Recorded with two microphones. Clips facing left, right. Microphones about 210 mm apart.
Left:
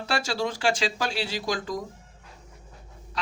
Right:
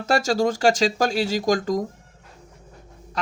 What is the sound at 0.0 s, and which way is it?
Speech, 45° right (ahead or behind).